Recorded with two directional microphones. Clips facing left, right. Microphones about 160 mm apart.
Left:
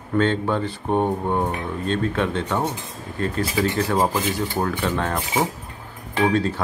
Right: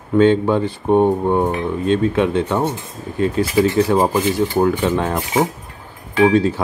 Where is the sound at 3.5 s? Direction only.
25° right (ahead or behind).